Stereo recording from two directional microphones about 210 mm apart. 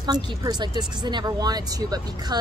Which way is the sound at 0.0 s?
20° right (ahead or behind).